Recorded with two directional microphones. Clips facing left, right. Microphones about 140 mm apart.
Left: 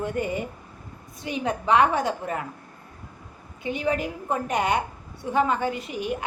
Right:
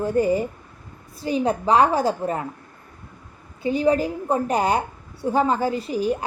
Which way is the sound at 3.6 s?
35° right (ahead or behind).